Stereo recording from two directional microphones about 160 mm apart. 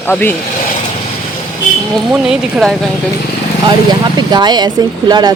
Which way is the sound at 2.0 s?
5° right (ahead or behind).